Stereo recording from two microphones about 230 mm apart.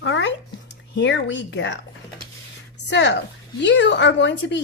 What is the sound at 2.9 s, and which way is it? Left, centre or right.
A woman's voice, left.